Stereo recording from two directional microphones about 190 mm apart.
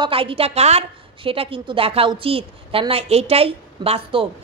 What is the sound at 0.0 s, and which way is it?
A woman's voice, 30° right (ahead or behind).